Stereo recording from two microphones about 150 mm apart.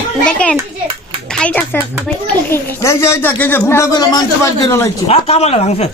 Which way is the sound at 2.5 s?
15° left (ahead or behind).